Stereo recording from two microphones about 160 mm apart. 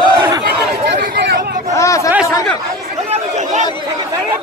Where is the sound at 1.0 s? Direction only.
80° right.